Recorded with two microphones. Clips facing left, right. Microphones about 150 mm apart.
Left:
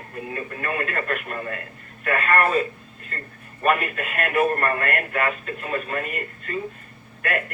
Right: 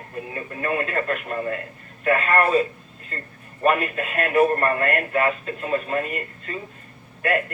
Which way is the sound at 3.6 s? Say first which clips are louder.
Right 1 dB; 30° right (ahead or behind).